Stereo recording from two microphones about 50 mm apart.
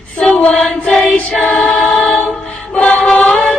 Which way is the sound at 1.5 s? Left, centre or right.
Left.